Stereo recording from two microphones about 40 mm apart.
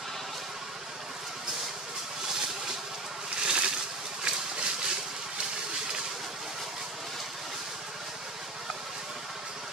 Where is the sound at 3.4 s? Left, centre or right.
Centre.